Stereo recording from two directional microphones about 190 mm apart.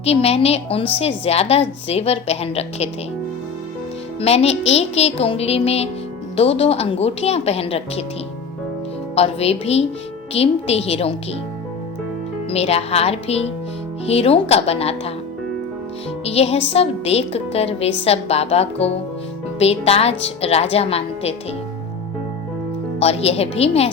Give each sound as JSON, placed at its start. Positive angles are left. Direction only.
{"t": 0.0, "sound": "a woman's voice", "side_deg": 30}
{"t": 4.2, "sound": "a woman's voice", "side_deg": 35}
{"t": 9.1, "sound": "a woman's voice", "side_deg": 30}
{"t": 12.5, "sound": "a woman's voice", "side_deg": 30}
{"t": 16.2, "sound": "a woman's voice", "side_deg": 30}
{"t": 23.0, "sound": "a woman's voice", "side_deg": 35}